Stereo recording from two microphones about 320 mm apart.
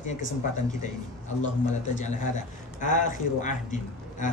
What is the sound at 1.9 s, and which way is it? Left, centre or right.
A man's voice, left.